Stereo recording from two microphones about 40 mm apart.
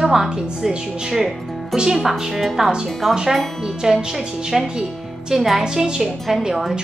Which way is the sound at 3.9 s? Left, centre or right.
Centre.